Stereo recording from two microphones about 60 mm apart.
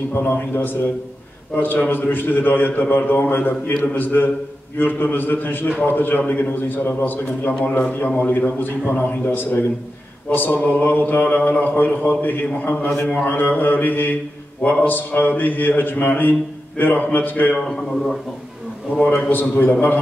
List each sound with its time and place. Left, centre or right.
0.1 s a man's voice: left
17.6 s a man's voice: centre
19.1 s a man's voice: left